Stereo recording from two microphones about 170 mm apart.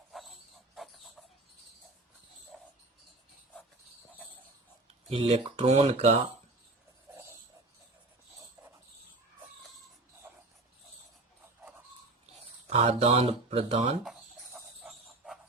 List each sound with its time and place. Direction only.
0.1 s pig: centre (ahead or behind)
5.0 s speech: 35° right (ahead or behind)
12.6 s speech: 35° right (ahead or behind)
14.0 s a sound: 5° right (ahead or behind)